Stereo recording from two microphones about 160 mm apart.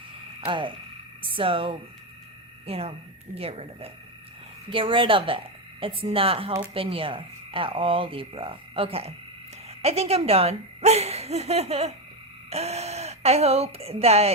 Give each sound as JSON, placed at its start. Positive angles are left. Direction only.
{"t": 0.4, "sound": "speech", "side_deg": -30}